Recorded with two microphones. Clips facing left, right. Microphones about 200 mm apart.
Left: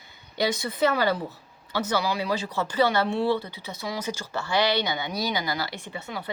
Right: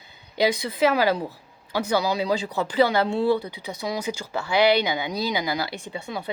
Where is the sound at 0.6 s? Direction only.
15° right (ahead or behind).